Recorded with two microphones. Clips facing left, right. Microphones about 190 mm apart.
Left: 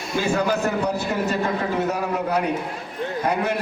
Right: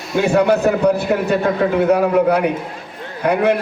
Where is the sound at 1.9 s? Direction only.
60° right (ahead or behind).